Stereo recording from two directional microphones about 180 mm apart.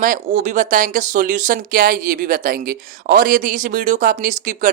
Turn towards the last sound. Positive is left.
turn(degrees=-45)  # may be behind; listen again after turning